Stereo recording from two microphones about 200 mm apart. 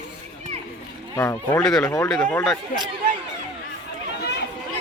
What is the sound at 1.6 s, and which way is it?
Speech, 5° left (ahead or behind).